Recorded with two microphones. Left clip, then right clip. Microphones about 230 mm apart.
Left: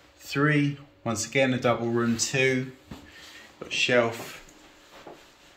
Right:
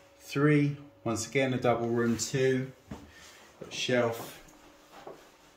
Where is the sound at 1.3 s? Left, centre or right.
Left.